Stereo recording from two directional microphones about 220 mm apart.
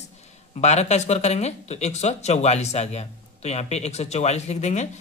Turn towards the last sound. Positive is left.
turn(degrees=30)  # may be behind; listen again after turning